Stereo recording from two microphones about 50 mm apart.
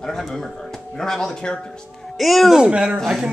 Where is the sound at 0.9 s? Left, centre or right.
Centre.